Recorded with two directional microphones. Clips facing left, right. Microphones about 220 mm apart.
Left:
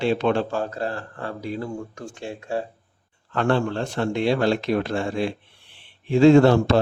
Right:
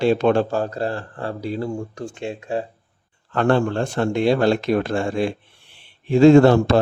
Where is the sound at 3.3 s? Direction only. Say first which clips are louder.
Right 3 dB; 45° right (ahead or behind).